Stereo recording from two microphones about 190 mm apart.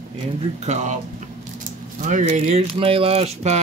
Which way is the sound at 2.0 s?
40° right (ahead or behind).